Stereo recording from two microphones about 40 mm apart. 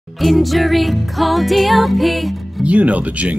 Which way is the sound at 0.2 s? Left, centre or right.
Centre.